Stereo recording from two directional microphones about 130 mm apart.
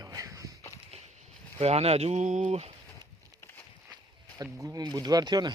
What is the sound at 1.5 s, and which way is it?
Speech, 55° right (ahead or behind).